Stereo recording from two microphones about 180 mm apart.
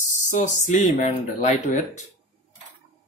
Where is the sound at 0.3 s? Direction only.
40° left (ahead or behind).